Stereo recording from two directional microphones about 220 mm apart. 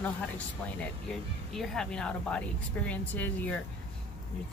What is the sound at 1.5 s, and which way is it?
A woman's voice, centre (ahead or behind).